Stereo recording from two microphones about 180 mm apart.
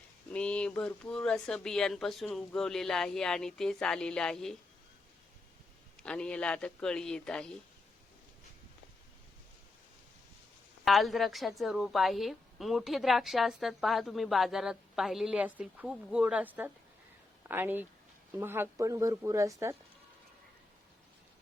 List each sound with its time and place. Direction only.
0.3 s a woman's voice: 5° left (ahead or behind)
6.0 s a woman's voice: 5° left (ahead or behind)
10.8 s a woman's voice: centre (ahead or behind); by 19.7 s 15° right (ahead or behind)